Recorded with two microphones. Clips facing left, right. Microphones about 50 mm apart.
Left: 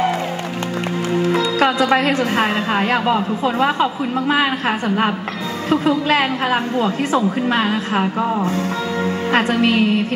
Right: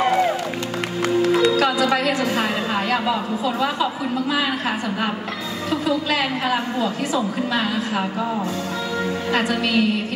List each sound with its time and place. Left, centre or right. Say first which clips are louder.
1.6 s a woman's voice: left 3 dB; left